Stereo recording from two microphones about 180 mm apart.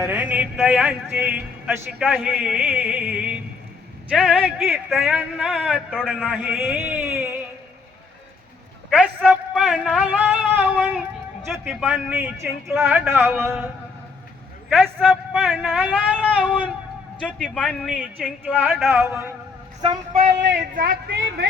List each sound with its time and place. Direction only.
0.0 s a man's voice: 10° right (ahead or behind)
8.9 s a sound: centre (ahead or behind)
11.6 s a man's voice: 5° right (ahead or behind)
14.7 s a man's voice: centre (ahead or behind)
16.2 s a man's voice: 5° left (ahead or behind); by 19.3 s 10° right (ahead or behind)
20.7 s speech: 60° right (ahead or behind)